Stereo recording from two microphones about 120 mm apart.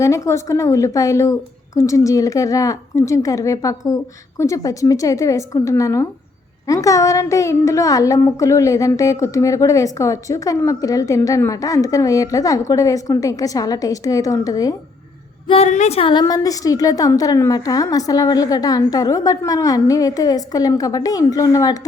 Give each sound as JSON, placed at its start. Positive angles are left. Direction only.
{"t": 0.0, "sound": "a woman's voice", "side_deg": 25}
{"t": 15.4, "sound": "a woman's voice", "side_deg": 55}
{"t": 15.7, "sound": "a woman's voice", "side_deg": 75}
{"t": 16.0, "sound": "a woman's voice", "side_deg": 45}
{"t": 16.2, "sound": "a woman's voice", "side_deg": 30}